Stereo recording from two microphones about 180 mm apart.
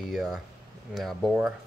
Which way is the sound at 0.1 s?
Centre (ahead or behind).